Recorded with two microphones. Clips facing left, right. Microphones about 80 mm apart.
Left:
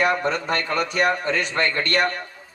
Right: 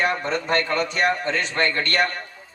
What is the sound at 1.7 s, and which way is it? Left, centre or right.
Speech, left.